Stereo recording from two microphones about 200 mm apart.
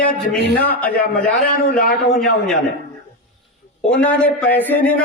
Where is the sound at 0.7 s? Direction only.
10° left (ahead or behind).